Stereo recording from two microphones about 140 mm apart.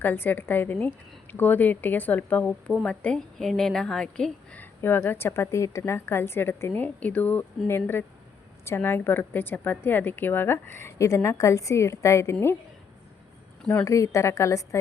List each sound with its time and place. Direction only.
0.0 s a woman's voice: 15° left (ahead or behind)
13.7 s a woman's voice: 20° left (ahead or behind)